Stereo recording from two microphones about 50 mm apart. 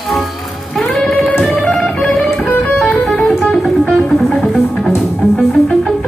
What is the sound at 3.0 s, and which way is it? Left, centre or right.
Music, centre.